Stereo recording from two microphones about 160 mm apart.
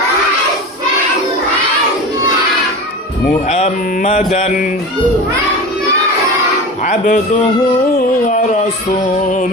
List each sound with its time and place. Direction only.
3.5 s mantra: 45° left (ahead or behind)
6.8 s mantra: 55° left (ahead or behind)
7.9 s music: 55° left (ahead or behind)
9.2 s mantra: 50° left (ahead or behind)